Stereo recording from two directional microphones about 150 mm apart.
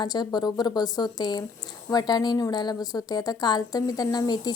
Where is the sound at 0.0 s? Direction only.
30° left (ahead or behind).